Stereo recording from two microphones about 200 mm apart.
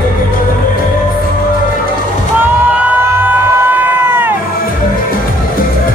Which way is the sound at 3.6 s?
10° right (ahead or behind).